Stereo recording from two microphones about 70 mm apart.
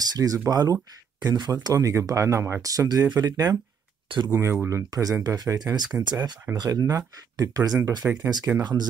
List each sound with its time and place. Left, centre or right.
0.1 s speech: right
1.2 s speech: right
2.6 s speech: right
3.1 s speech: right
4.3 s speech: right
5.2 s speech: right
6.0 s speech: right
6.5 s speech: right
8.1 s speech: right